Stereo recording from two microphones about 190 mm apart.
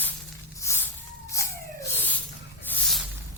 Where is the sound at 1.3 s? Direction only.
15° left (ahead or behind).